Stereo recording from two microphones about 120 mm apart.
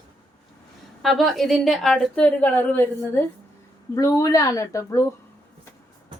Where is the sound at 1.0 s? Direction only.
Centre (ahead or behind); by 3.3 s 15° left (ahead or behind).